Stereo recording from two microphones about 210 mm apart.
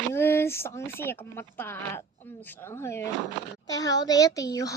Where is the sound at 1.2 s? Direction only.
10° left (ahead or behind).